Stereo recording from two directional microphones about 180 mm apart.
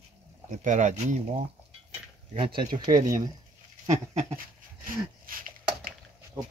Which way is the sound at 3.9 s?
40° right (ahead or behind).